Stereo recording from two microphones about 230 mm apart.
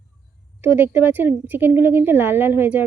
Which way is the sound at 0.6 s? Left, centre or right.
Centre.